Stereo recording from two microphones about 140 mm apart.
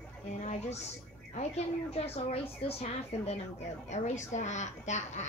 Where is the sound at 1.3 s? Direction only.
50° left (ahead or behind).